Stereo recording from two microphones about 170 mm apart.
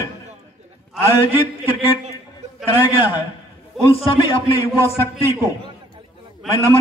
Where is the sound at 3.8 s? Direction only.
30° left (ahead or behind).